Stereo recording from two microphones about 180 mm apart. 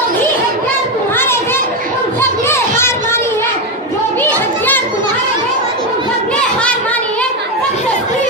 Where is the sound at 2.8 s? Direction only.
15° left (ahead or behind).